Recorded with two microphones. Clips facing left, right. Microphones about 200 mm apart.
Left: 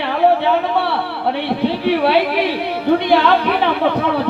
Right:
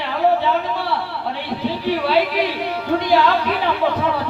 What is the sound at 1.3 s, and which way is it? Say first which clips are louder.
Speech: left 6 dB; 65° left (ahead or behind).